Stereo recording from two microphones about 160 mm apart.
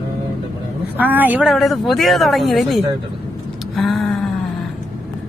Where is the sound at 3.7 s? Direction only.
Centre (ahead or behind).